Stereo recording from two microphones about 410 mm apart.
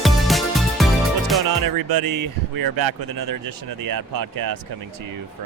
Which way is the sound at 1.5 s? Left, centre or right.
Right.